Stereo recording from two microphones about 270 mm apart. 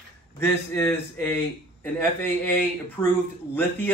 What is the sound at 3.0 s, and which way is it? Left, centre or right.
Speech, centre.